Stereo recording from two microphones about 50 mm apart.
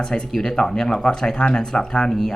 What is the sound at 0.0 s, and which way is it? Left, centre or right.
Speech, centre.